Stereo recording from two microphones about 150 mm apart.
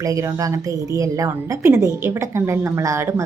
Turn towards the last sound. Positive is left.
turn(degrees=-20)  # may be behind; listen again after turning